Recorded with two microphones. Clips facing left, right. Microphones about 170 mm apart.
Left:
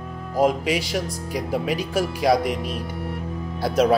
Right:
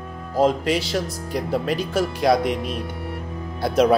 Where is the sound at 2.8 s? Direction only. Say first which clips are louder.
Left 1 dB; centre (ahead or behind).